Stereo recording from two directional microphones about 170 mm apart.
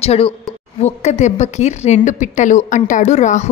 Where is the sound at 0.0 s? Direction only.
35° left (ahead or behind).